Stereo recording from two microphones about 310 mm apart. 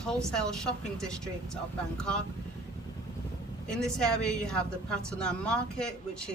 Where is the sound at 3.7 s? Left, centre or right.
Centre.